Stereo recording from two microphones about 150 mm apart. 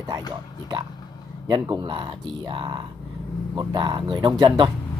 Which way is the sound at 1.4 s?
25° right (ahead or behind).